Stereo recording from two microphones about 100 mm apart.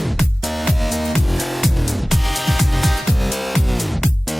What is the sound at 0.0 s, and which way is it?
Music, centre (ahead or behind).